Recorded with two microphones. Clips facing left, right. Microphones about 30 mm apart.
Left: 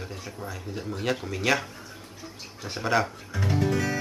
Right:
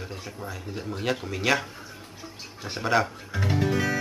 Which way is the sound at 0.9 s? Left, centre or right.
Centre.